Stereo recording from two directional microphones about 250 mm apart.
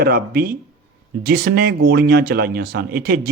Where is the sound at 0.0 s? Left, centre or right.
Right.